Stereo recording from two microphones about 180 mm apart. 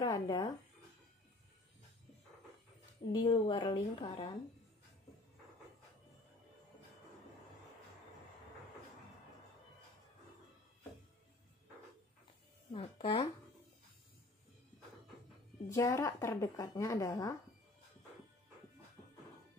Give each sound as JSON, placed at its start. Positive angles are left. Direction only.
{"t": 0.0, "sound": "speech", "side_deg": 20}
{"t": 3.1, "sound": "a woman's voice", "side_deg": 20}
{"t": 12.7, "sound": "a woman's voice", "side_deg": 30}
{"t": 15.7, "sound": "a woman's voice", "side_deg": 15}